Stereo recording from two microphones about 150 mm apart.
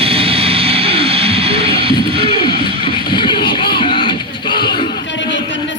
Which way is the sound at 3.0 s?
30° left (ahead or behind).